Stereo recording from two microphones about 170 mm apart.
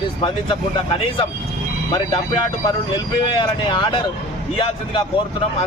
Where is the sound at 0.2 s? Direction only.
30° left (ahead or behind).